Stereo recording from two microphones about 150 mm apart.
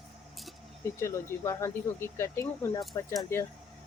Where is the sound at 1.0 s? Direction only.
15° left (ahead or behind).